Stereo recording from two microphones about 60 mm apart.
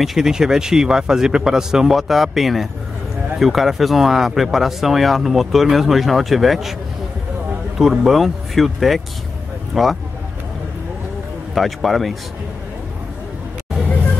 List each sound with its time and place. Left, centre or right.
0.0 s speech: centre
7.8 s speech: centre
11.5 s speech: centre